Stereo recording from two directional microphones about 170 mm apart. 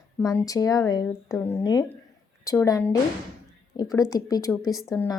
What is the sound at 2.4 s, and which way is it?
Speech, 20° left (ahead or behind).